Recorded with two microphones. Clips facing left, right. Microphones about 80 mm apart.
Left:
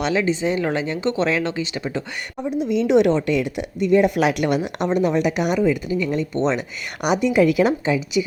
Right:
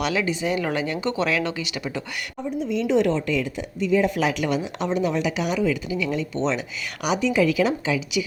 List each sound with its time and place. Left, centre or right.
0.0 s speech: left
2.5 s a woman's voice: left
5.5 s a woman's voice: left